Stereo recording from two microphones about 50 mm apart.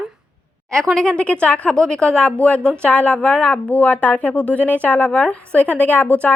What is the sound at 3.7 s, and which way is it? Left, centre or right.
A woman's voice, left.